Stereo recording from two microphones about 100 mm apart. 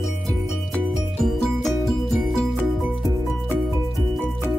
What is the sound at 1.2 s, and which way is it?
Music, 5° left (ahead or behind).